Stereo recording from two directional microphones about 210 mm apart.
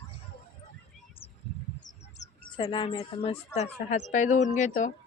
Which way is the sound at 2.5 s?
25° left (ahead or behind).